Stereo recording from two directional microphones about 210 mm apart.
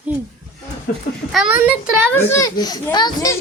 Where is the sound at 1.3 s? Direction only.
5° right (ahead or behind).